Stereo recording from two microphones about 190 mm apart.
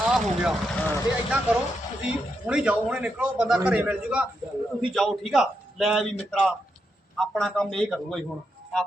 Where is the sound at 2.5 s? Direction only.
5° right (ahead or behind).